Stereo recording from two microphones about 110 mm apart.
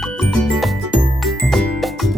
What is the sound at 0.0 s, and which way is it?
Music, 5° left (ahead or behind).